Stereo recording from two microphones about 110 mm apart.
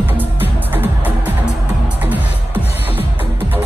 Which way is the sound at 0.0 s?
15° right (ahead or behind).